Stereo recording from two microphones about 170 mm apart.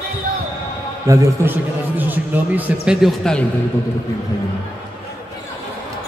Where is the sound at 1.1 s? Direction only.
10° right (ahead or behind).